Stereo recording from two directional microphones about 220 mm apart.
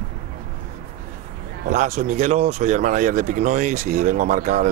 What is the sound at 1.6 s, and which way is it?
Speech, 35° right (ahead or behind).